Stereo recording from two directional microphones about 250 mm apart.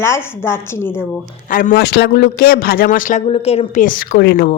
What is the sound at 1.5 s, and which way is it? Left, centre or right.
A man's voice, left.